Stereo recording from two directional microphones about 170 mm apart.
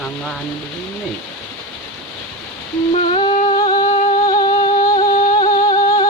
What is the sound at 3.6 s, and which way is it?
Humming, 25° left (ahead or behind).